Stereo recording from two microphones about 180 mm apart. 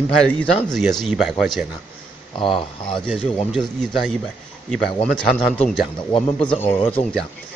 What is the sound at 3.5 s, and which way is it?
A man's voice, centre (ahead or behind).